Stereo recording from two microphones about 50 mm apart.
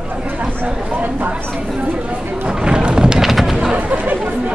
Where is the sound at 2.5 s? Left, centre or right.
Centre.